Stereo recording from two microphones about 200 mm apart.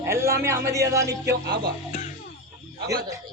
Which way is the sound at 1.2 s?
55° right (ahead or behind).